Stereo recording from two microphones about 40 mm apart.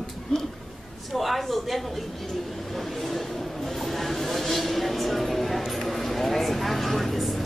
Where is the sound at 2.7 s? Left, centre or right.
Centre.